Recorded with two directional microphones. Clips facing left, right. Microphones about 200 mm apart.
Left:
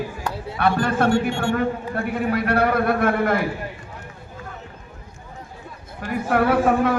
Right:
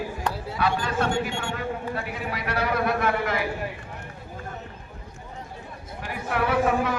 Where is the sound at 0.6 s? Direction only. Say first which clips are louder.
Left 6 dB; 55° left (ahead or behind).